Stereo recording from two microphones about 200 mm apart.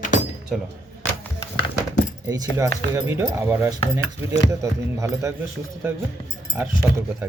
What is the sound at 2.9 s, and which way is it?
Speech, 15° right (ahead or behind).